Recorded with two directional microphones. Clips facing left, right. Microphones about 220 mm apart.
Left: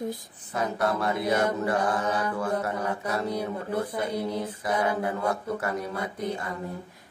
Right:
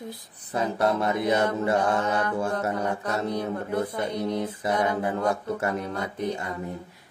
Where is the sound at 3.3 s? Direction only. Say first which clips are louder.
Right 1 dB; 10° left (ahead or behind).